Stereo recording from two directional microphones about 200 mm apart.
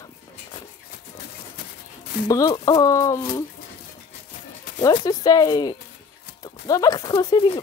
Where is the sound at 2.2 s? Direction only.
15° left (ahead or behind).